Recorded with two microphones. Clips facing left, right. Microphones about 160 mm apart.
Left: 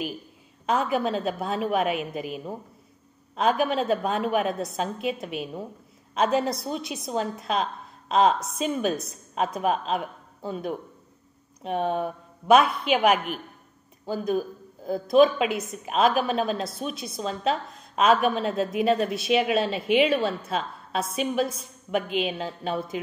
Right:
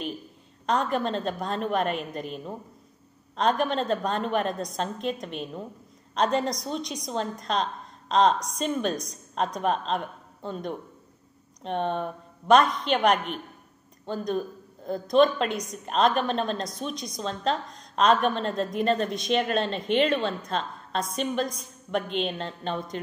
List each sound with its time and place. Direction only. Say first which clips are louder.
0.7 s a woman's voice: left 1 dB; 5° left (ahead or behind)